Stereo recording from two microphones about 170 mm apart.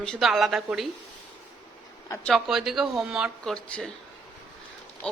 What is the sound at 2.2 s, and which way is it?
A woman's voice, centre (ahead or behind).